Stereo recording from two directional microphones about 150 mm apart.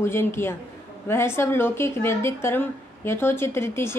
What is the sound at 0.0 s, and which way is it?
A woman's voice, 15° left (ahead or behind).